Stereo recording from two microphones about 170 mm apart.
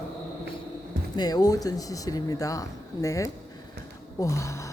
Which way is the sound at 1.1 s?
25° left (ahead or behind).